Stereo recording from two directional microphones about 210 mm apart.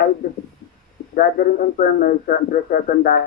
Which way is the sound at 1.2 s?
45° left (ahead or behind).